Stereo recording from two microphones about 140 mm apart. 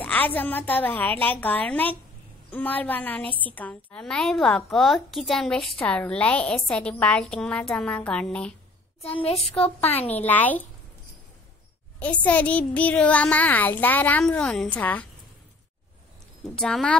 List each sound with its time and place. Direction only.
0.0 s a woman's voice: 10° left (ahead or behind)
9.0 s a woman's voice: 45° left (ahead or behind)
9.4 s a woman's voice: 5° left (ahead or behind)
9.8 s a woman's voice: 45° left (ahead or behind)
10.1 s a woman's voice: 10° left (ahead or behind)
12.0 s a woman's voice: 10° left (ahead or behind)
16.5 s a woman's voice: 5° left (ahead or behind)